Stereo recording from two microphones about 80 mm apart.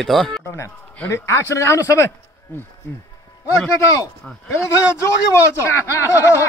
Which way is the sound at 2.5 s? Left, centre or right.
Left.